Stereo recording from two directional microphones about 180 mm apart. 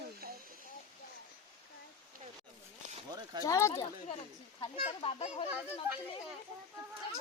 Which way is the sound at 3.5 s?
20° left (ahead or behind).